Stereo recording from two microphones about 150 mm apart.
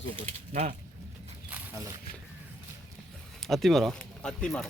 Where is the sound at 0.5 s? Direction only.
45° right (ahead or behind).